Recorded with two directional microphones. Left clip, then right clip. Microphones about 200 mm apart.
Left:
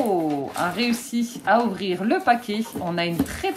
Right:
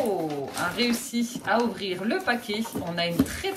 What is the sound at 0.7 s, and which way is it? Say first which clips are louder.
Speech: left 2 dB; 30° left (ahead or behind).